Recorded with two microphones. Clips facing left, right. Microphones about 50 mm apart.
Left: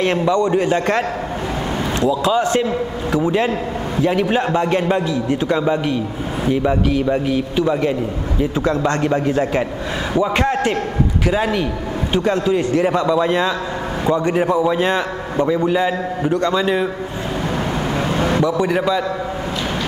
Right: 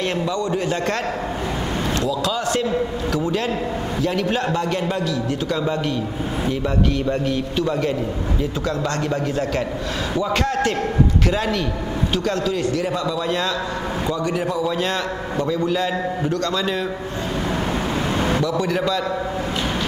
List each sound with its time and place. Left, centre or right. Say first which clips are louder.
0.0 s a man's voice: left 6 dB; left
18.1 s a man's voice: left 4 dB; centre